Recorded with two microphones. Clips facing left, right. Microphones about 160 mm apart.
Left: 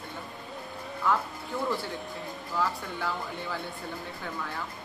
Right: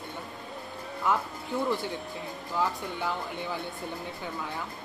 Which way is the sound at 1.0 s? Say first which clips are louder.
Even; 20° right (ahead or behind).